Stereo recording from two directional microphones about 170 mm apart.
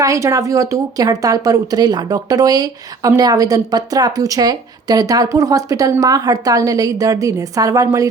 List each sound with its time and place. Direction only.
0.0 s speech: 20° right (ahead or behind)